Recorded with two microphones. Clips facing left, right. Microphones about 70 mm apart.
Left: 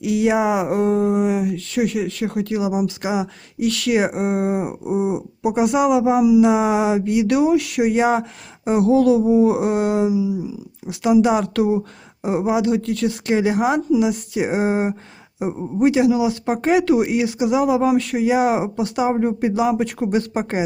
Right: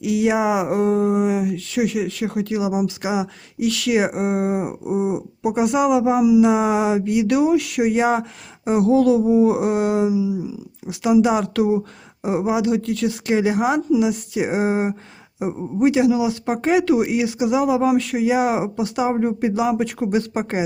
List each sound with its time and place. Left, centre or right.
0.0 s speech: centre